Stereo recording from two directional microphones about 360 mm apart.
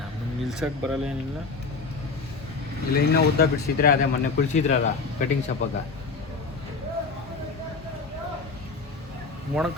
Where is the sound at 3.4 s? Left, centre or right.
Left.